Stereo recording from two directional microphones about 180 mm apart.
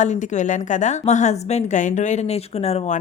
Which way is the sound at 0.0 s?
40° left (ahead or behind).